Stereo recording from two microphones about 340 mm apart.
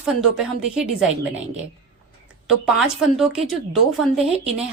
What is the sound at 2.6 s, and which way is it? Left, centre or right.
Speech, centre.